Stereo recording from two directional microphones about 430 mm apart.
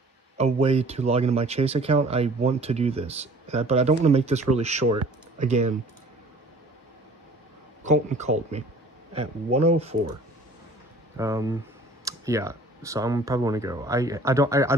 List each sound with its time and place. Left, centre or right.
0.4 s speech: centre
7.8 s speech: centre
11.1 s speech: centre